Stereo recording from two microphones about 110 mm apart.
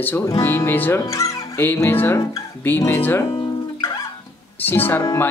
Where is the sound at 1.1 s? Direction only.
30° left (ahead or behind).